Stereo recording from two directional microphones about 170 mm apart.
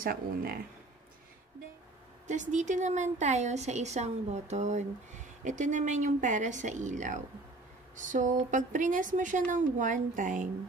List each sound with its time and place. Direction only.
0.0 s speech: 60° right (ahead or behind)
2.2 s a woman's voice: 45° right (ahead or behind)